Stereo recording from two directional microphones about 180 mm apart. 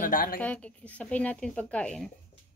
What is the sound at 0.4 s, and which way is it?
Speech, 10° left (ahead or behind).